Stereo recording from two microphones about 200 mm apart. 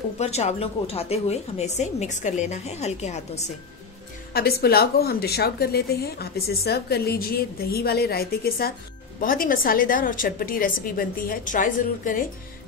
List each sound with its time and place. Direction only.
0.2 s a woman's voice: 35° left (ahead or behind)
4.3 s a woman's voice: 50° left (ahead or behind)